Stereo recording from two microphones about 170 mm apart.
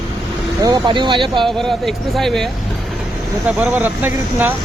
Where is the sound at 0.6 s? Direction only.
25° right (ahead or behind).